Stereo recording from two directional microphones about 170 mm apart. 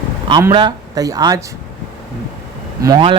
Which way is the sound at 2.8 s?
25° right (ahead or behind).